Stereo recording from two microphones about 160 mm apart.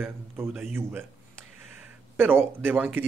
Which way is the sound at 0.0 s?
10° right (ahead or behind).